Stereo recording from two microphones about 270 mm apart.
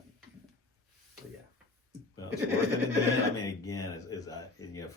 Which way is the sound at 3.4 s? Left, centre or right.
Centre.